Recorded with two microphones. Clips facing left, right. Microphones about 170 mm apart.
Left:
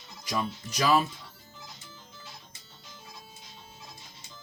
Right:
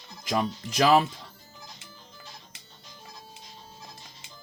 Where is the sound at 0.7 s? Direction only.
90° right.